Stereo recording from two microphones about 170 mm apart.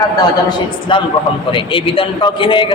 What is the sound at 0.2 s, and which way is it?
A man's voice, 25° left (ahead or behind).